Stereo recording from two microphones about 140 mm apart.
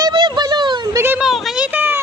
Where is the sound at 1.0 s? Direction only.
15° right (ahead or behind).